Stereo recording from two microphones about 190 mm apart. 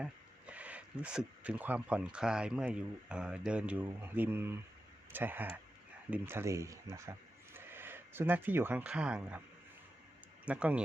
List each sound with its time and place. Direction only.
0.0 s speech: 5° right (ahead or behind)
10.4 s speech: 5° right (ahead or behind)